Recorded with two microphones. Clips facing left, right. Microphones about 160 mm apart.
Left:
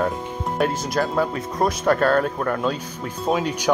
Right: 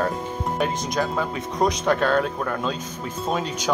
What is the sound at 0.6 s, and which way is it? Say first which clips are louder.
Speech: left 3 dB; 5° left (ahead or behind).